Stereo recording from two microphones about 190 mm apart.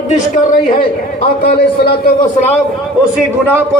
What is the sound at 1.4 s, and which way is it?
Speech, 55° left (ahead or behind).